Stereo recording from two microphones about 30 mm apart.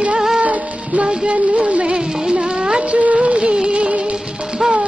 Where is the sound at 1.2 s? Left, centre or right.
Right.